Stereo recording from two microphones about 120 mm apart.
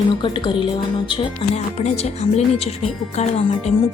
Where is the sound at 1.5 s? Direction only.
65° left (ahead or behind).